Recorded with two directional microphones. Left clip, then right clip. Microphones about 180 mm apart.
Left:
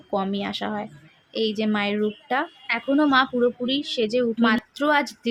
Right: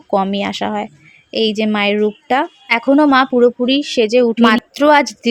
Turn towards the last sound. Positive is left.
turn(degrees=-45)  # may be behind; listen again after turning